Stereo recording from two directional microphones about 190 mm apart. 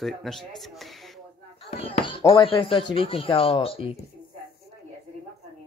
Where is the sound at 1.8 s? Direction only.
30° left (ahead or behind).